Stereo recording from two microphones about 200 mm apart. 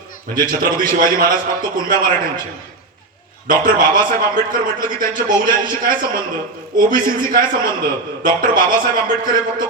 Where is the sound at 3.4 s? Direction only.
45° right (ahead or behind).